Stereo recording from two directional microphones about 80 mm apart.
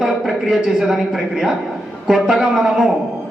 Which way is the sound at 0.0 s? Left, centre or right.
Centre.